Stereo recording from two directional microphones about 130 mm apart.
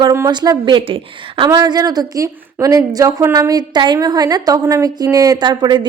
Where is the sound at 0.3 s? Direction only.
35° right (ahead or behind).